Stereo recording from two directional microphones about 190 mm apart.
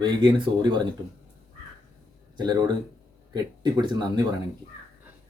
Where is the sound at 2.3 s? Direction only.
20° right (ahead or behind).